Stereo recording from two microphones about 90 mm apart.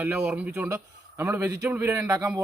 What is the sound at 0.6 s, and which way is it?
A man's voice, 30° right (ahead or behind).